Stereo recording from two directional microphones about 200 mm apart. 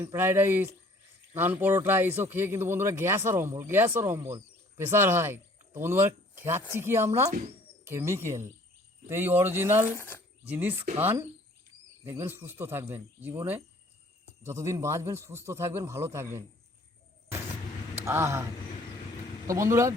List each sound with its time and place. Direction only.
0.0 s a man's voice: 10° right (ahead or behind)
7.3 s speech: 35° right (ahead or behind)
7.9 s a man's voice: 10° right (ahead or behind)
10.0 s speech: 10° left (ahead or behind)
10.4 s a man's voice: 10° right (ahead or behind)
18.0 s speech: 15° right (ahead or behind)
19.5 s a man's voice: 15° right (ahead or behind)